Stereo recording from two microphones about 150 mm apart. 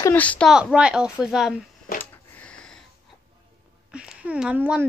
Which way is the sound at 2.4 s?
5° left (ahead or behind).